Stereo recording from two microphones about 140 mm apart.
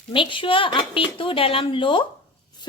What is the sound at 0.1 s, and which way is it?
A woman's voice, 35° left (ahead or behind).